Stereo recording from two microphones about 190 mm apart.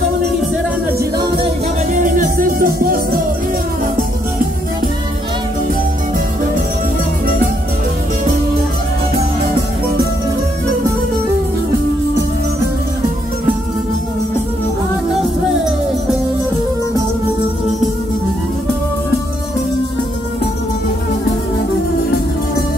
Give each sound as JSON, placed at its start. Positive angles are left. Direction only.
{"t": 0.9, "sound": "music", "side_deg": -20}
{"t": 2.0, "sound": "music", "side_deg": -45}